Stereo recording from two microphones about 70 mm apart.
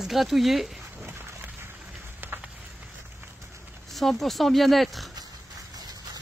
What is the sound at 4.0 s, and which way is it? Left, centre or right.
Speech, centre.